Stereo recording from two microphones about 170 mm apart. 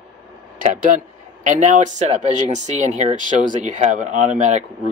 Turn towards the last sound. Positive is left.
turn(degrees=-45)  # may be behind; listen again after turning